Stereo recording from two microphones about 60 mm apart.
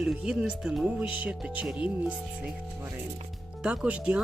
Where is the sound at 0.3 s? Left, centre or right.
Centre.